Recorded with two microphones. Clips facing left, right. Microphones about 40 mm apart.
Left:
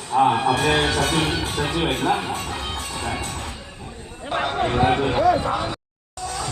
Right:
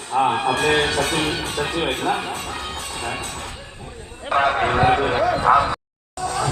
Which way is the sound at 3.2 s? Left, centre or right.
Right.